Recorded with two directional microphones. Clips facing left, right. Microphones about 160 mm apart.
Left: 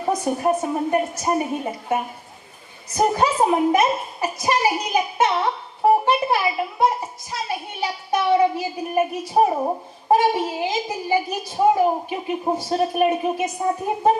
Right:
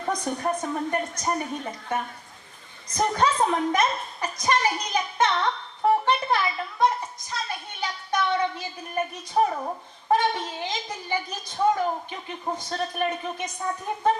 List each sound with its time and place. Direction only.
0.2 s a woman's voice: 5° left (ahead or behind)
0.4 s a woman's voice: 25° left (ahead or behind)
3.2 s a woman's voice: 10° left (ahead or behind)
9.5 s speech: 30° left (ahead or behind)
10.1 s a woman's voice: 10° left (ahead or behind)
13.6 s speech: 25° left (ahead or behind)
13.8 s a woman's voice: 15° left (ahead or behind)